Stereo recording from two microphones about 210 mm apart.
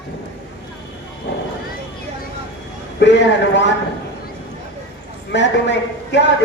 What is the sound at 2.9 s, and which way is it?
Speech, 55° left (ahead or behind).